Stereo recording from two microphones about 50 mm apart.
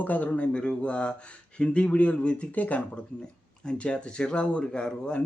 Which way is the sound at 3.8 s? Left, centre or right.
Centre.